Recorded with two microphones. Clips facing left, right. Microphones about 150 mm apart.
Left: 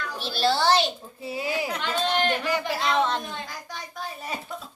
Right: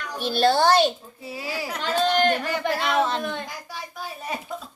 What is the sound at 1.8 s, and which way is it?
Speech, 40° right (ahead or behind).